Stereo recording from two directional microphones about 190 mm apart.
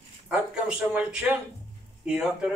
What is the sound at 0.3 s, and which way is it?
A man's voice, 5° right (ahead or behind).